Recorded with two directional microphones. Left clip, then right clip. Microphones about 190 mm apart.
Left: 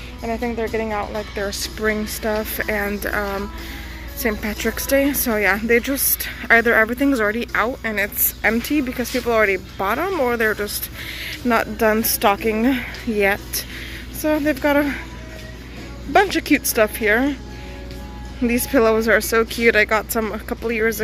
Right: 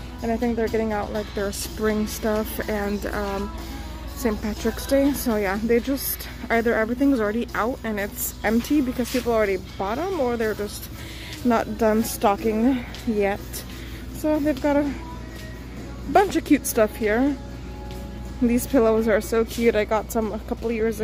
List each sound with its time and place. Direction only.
0.2 s speech: 15° right (ahead or behind)
4.3 s speech: centre (ahead or behind)
9.8 s speech: 5° left (ahead or behind)
16.1 s speech: 15° right (ahead or behind)
18.4 s speech: 10° right (ahead or behind)